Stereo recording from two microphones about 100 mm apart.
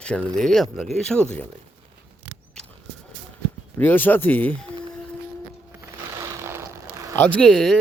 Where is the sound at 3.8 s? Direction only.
20° left (ahead or behind).